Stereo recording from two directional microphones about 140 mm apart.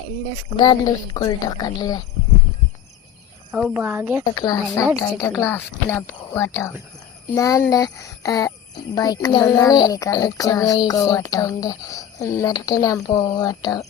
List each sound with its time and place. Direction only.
0.5 s a child's voice: 30° left (ahead or behind)
3.5 s speech: 5° right (ahead or behind)
4.4 s a child's voice: 25° left (ahead or behind)